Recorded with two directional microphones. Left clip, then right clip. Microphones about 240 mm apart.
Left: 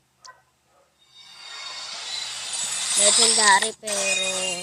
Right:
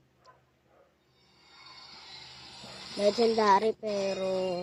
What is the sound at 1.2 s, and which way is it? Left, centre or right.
Music, left.